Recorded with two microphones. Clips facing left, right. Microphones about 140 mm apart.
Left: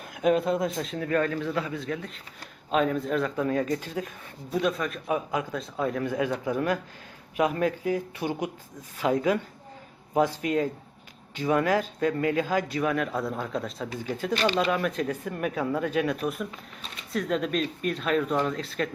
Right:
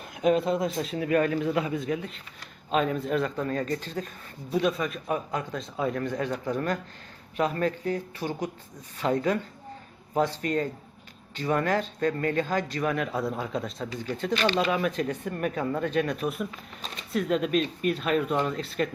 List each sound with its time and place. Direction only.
0.1 s a man's voice: centre (ahead or behind); by 2.0 s 15° right (ahead or behind)
2.6 s a man's voice: centre (ahead or behind)
4.5 s a man's voice: centre (ahead or behind)